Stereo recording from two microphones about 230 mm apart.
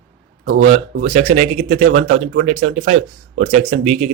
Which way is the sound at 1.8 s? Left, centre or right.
Right.